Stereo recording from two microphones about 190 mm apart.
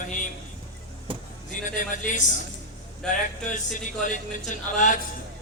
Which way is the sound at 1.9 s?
40° left (ahead or behind).